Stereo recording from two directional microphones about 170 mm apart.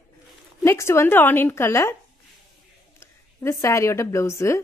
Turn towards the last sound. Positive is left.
turn(degrees=15)  # may be behind; listen again after turning